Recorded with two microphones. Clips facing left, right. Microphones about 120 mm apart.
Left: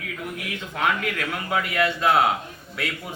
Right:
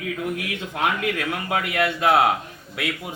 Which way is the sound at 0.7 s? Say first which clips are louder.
Right 1 dB; 20° right (ahead or behind).